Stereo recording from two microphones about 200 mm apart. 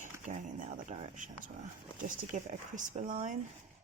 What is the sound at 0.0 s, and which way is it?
Speech, 40° right (ahead or behind).